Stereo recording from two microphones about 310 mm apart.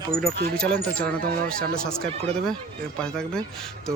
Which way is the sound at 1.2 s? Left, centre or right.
Right.